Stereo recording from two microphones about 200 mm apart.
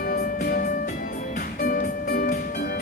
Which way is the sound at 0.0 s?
50° left (ahead or behind).